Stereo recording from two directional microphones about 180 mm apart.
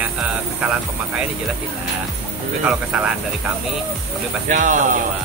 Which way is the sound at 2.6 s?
5° right (ahead or behind).